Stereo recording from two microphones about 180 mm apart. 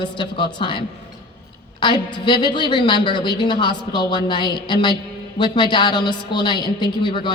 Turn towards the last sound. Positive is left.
turn(degrees=25)  # may be behind; listen again after turning